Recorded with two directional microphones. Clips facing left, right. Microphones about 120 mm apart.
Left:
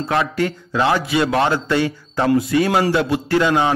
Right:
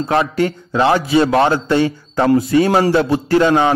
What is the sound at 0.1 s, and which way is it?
A man's voice, 30° right (ahead or behind).